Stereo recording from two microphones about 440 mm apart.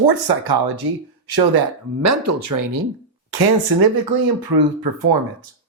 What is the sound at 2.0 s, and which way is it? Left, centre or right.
Speech, right.